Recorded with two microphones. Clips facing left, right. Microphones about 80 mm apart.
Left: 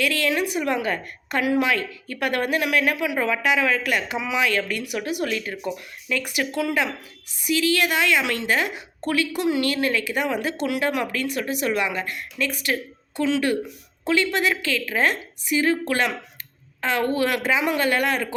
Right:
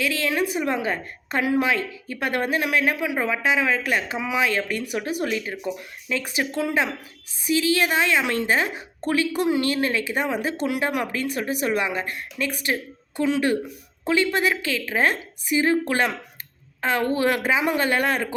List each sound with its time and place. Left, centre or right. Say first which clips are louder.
0.0 s a woman's voice: left 1 dB; right